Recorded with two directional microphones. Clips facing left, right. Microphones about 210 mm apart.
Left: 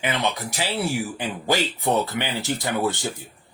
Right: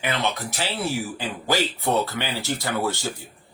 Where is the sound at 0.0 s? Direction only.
15° left (ahead or behind).